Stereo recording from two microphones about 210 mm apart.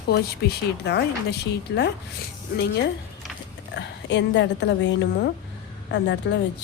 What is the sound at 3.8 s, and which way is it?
A woman's voice, 55° left (ahead or behind).